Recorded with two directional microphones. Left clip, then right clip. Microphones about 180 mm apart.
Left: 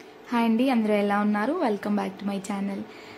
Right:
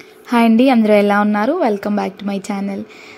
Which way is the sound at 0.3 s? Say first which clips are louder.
Right 11 dB; 40° right (ahead or behind).